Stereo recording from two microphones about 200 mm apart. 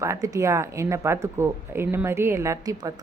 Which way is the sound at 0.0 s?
15° right (ahead or behind).